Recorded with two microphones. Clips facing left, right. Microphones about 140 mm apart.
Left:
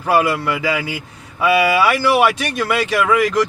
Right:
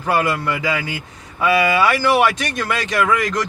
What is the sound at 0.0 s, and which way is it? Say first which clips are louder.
A man's voice: left 3 dB; 5° left (ahead or behind).